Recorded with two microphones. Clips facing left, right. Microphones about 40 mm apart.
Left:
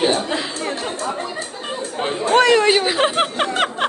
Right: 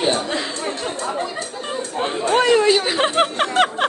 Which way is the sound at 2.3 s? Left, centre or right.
Left.